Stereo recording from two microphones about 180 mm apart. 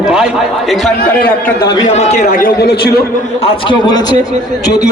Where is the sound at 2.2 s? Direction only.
60° left (ahead or behind).